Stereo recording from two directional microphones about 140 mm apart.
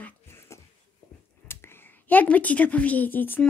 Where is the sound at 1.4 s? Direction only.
15° left (ahead or behind).